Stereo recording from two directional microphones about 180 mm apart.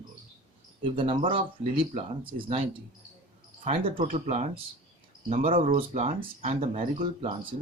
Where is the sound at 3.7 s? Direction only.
30° right (ahead or behind).